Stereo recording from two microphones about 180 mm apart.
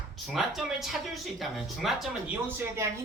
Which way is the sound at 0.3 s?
Centre (ahead or behind).